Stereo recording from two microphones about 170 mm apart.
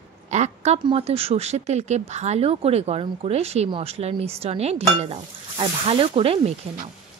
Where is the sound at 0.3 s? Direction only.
45° right (ahead or behind).